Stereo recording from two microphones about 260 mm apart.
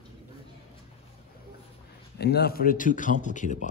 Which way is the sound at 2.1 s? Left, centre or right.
Left.